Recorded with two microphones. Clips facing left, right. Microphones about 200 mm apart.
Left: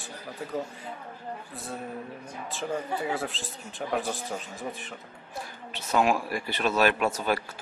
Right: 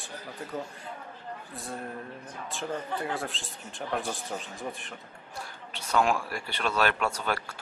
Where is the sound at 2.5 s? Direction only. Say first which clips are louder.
Left 2 dB; 5° left (ahead or behind).